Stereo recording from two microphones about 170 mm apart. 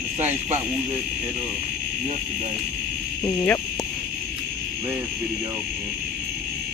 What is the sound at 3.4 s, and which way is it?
Speech, 20° left (ahead or behind).